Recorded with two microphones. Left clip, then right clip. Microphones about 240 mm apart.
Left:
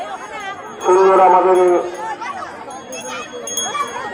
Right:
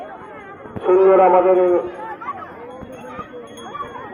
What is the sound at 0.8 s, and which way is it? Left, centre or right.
Speech, left.